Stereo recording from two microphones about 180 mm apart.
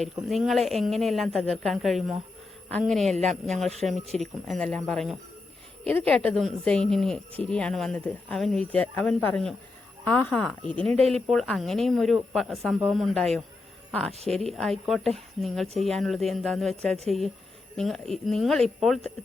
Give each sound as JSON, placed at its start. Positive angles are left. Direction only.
{"t": 0.0, "sound": "speech", "side_deg": 0}
{"t": 10.9, "sound": "speech", "side_deg": -35}
{"t": 11.3, "sound": "speech", "side_deg": 0}
{"t": 14.3, "sound": "speech", "side_deg": 0}